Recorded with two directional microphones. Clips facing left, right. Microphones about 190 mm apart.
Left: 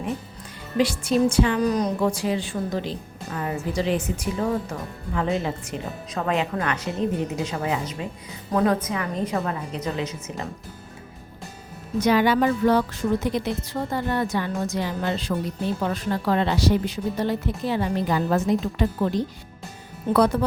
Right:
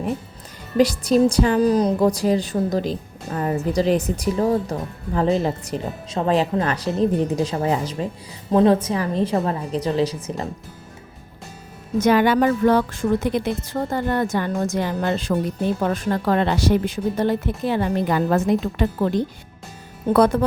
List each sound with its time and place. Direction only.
0.8 s a woman's voice: 40° right (ahead or behind)
11.9 s a woman's voice: 50° right (ahead or behind)